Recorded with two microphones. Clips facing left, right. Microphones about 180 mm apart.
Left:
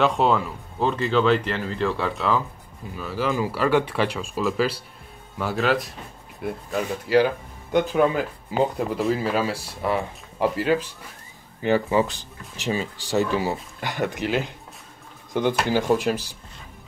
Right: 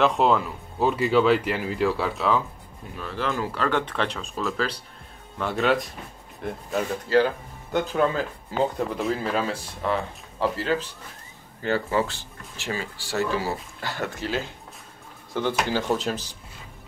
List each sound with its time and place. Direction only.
0.0 s speech: centre (ahead or behind)
8.9 s speech: 5° left (ahead or behind)
15.5 s speech: 10° left (ahead or behind)